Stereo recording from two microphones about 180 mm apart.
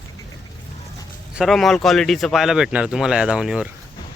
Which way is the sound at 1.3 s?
Centre (ahead or behind).